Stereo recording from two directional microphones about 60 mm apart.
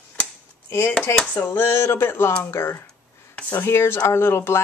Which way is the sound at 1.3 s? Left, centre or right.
Left.